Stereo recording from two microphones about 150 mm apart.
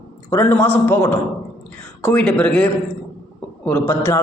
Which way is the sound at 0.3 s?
15° left (ahead or behind).